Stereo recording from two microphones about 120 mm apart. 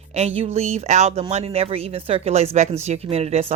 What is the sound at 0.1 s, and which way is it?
Speech, 65° right (ahead or behind).